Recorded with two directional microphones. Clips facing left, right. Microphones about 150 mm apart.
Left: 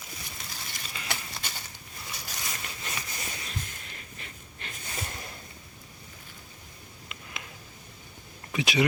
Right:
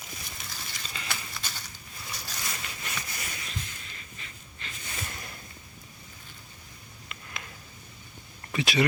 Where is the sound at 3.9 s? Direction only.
50° left (ahead or behind).